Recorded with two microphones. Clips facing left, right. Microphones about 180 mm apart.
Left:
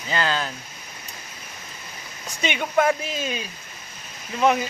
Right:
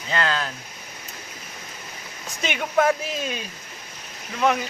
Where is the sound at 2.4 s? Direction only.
Centre (ahead or behind).